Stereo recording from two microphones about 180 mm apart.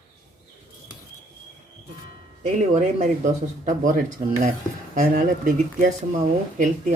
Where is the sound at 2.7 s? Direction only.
40° right (ahead or behind).